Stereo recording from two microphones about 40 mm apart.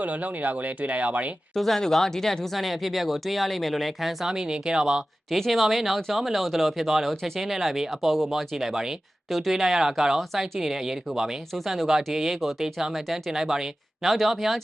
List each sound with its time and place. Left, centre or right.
0.0 s speech: right
1.5 s speech: centre
4.3 s speech: centre
5.3 s speech: centre
13.3 s speech: centre
14.0 s speech: centre